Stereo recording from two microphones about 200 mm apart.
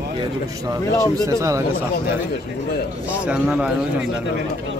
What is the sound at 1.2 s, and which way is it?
Speech, 15° right (ahead or behind).